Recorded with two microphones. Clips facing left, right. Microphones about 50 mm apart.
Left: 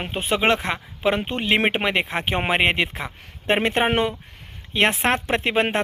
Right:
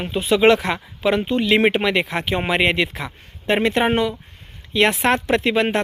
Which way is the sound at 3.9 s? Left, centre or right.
Left.